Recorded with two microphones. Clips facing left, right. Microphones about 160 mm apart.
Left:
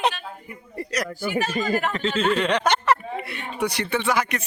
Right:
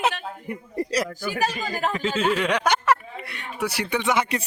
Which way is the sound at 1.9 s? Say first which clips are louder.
Left 1 dB; 10° right (ahead or behind).